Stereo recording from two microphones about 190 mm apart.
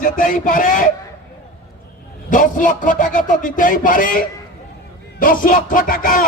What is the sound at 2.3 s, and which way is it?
Speech, 45° left (ahead or behind).